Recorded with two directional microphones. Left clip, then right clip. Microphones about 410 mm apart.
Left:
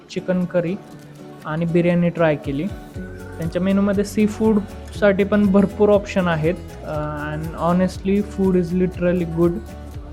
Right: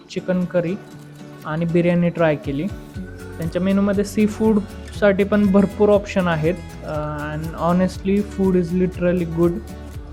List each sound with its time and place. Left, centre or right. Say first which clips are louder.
0.1 s speech: even; centre